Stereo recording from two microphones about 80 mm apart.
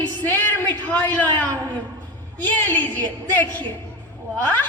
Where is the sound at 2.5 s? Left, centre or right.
Centre.